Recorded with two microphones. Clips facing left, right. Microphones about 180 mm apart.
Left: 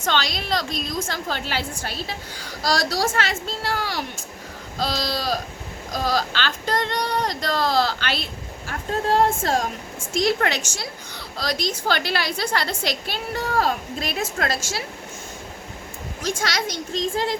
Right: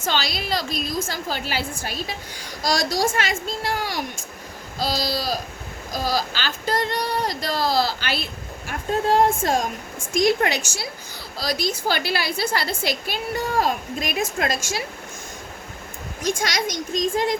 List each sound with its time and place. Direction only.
0.0 s a woman's voice: 5° right (ahead or behind)
4.8 s a woman's voice: 5° right (ahead or behind)
16.2 s a woman's voice: 15° right (ahead or behind)